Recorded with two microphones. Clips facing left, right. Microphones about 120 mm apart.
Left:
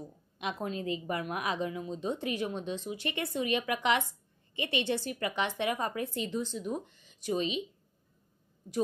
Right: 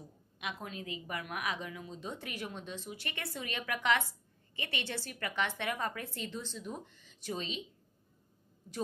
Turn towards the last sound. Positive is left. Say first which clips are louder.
# left 8 dB
turn(degrees=15)  # may be behind; listen again after turning